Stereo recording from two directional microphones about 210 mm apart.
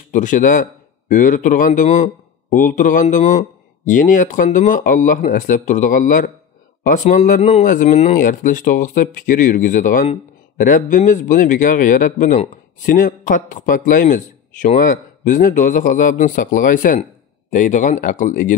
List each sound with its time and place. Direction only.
0.1 s speech: 35° left (ahead or behind)